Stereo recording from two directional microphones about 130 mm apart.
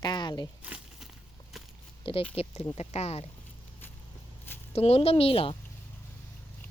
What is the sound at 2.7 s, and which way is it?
Speech, 55° left (ahead or behind).